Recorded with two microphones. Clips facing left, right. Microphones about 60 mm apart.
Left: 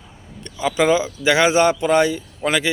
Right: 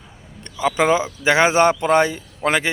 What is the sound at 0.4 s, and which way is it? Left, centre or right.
A man's voice, right.